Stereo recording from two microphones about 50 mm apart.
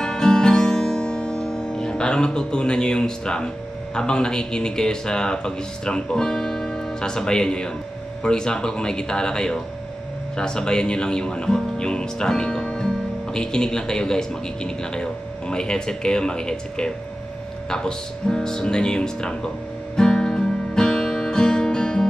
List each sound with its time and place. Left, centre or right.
0.0 s music: centre
8.2 s speech: centre
20.0 s music: centre